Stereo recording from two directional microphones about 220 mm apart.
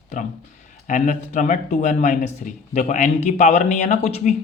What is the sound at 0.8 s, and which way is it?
Speech, 35° left (ahead or behind).